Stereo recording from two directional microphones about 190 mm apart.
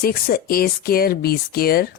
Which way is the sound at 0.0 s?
50° left (ahead or behind).